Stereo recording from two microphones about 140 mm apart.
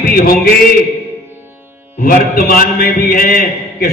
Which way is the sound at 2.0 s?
90° left.